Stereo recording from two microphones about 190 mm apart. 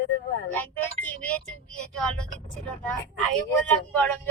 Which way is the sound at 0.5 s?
10° left (ahead or behind).